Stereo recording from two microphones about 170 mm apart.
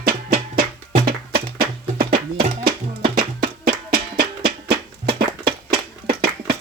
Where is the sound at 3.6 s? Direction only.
65° right (ahead or behind).